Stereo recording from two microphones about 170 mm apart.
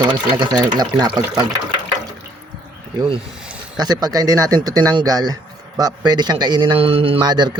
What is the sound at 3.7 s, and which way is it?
A man's voice, 25° right (ahead or behind).